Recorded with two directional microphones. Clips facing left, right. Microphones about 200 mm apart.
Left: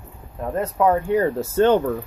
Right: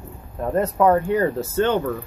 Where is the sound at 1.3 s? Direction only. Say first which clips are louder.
Left 3 dB; 35° left (ahead or behind).